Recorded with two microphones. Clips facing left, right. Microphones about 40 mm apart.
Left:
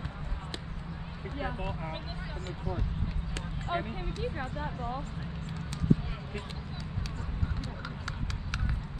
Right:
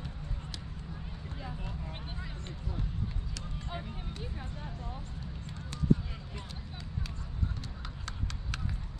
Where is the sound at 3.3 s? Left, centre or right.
Left.